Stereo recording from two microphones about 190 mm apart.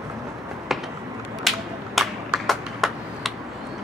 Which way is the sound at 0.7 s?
Centre (ahead or behind).